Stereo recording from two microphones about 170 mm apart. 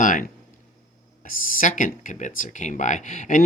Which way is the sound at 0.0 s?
50° left (ahead or behind).